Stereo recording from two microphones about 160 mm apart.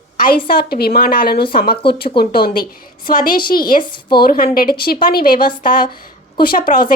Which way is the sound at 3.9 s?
30° left (ahead or behind).